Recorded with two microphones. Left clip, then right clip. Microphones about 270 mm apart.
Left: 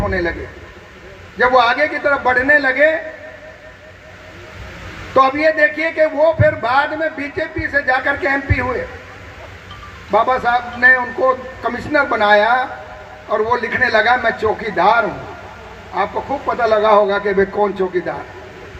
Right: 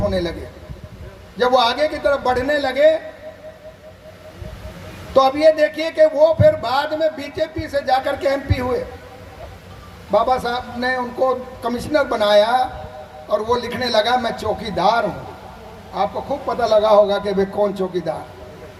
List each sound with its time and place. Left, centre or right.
0.1 s a man's voice: right
1.4 s a man's voice: right
5.1 s a man's voice: right
10.1 s a man's voice: right
16.5 s a man's voice: right